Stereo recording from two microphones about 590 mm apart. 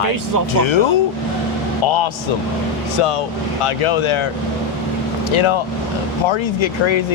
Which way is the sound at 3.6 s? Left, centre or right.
Left.